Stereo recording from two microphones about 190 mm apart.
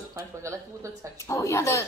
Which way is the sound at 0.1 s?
15° right (ahead or behind).